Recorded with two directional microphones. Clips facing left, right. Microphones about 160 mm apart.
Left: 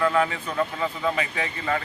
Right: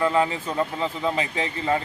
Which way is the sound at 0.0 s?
25° right (ahead or behind).